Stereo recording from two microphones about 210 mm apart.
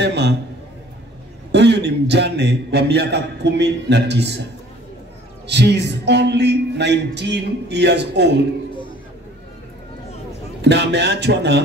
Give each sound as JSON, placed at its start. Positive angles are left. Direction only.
{"t": 0.0, "sound": "a man's voice", "side_deg": -55}
{"t": 1.5, "sound": "a man's voice", "side_deg": -55}
{"t": 5.5, "sound": "speech", "side_deg": -55}
{"t": 10.6, "sound": "a man's voice", "side_deg": -55}